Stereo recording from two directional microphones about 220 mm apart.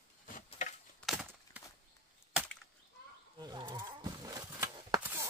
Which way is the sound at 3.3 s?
20° right (ahead or behind).